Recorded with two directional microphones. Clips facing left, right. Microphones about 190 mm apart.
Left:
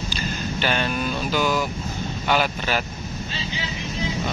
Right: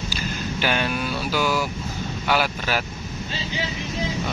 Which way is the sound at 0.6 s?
10° right (ahead or behind).